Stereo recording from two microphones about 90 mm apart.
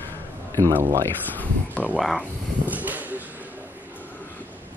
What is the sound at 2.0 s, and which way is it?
Speech, centre (ahead or behind).